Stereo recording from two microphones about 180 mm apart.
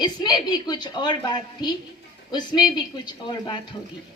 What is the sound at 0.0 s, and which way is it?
A woman's voice, 25° left (ahead or behind).